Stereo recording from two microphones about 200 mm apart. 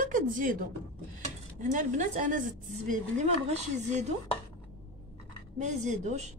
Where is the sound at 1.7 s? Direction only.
40° right (ahead or behind).